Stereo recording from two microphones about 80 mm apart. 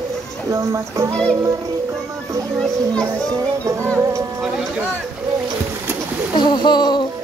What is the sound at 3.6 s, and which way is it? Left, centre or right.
Speech, right.